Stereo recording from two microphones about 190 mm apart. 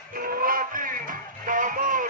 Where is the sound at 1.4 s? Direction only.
45° right (ahead or behind).